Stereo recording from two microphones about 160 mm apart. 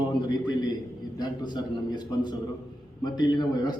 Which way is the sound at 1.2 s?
25° left (ahead or behind).